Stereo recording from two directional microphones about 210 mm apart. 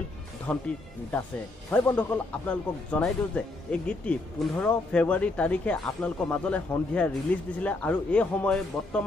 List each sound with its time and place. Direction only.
0.5 s a man's voice: 5° left (ahead or behind)
1.7 s a man's voice: 10° left (ahead or behind)